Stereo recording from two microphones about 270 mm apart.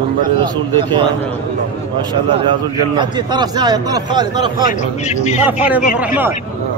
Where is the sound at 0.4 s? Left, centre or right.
Centre.